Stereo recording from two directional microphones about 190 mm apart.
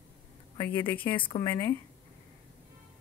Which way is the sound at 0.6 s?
10° left (ahead or behind).